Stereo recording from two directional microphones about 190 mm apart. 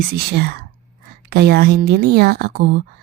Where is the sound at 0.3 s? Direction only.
55° right (ahead or behind).